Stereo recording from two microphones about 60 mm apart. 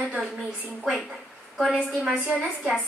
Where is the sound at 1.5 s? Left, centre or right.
Centre.